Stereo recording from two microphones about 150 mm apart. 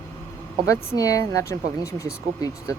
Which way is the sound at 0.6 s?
20° left (ahead or behind).